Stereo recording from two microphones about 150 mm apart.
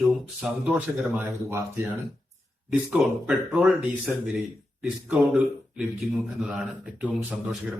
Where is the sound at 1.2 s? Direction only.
15° right (ahead or behind).